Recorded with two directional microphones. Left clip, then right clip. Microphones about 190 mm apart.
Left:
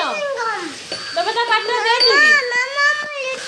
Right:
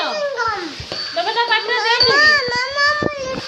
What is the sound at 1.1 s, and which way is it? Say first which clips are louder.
Cat: even; 10° left (ahead or behind).